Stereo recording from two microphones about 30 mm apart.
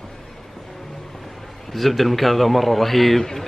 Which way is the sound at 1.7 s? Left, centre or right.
Centre.